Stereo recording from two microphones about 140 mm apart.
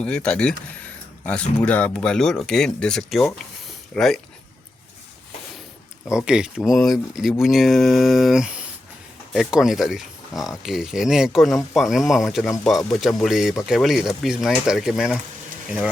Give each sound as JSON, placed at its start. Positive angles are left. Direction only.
{"t": 0.0, "sound": "speech", "side_deg": 5}
{"t": 6.1, "sound": "speech", "side_deg": -5}